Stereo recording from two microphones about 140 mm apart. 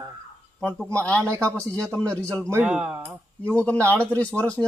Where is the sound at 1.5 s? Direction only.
5° left (ahead or behind).